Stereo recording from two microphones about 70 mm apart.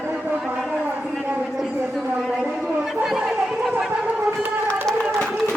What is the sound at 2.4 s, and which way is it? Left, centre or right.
Chatter, centre.